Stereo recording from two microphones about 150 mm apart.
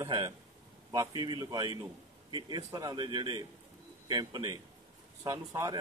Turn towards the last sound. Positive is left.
turn(degrees=-20)  # may be behind; listen again after turning